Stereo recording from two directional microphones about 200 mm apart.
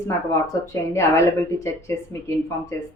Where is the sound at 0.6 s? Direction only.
15° left (ahead or behind).